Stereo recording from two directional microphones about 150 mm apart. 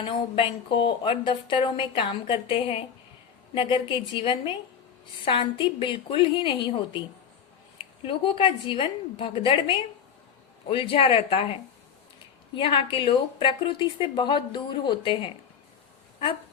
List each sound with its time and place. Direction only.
0.0 s speech: 35° left (ahead or behind)
8.0 s speech: 35° left (ahead or behind)
12.5 s speech: 35° left (ahead or behind)